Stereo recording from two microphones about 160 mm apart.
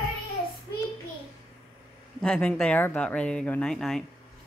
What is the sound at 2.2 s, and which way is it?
Speech, 5° left (ahead or behind).